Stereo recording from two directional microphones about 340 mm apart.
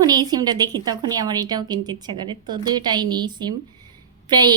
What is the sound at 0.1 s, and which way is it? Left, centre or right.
A woman's voice, centre.